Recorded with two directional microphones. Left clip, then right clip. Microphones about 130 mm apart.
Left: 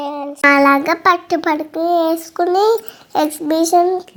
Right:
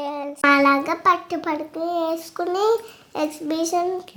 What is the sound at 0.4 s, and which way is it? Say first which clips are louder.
A child's voice: left 5 dB; 40° left (ahead or behind).